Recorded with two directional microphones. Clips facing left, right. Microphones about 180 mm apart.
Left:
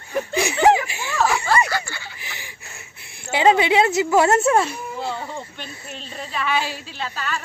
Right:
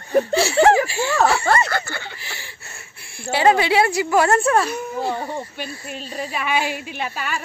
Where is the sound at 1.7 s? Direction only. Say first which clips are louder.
Right 2 dB; 55° right (ahead or behind).